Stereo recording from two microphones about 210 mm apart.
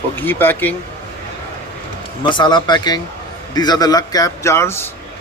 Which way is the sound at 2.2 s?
20° left (ahead or behind).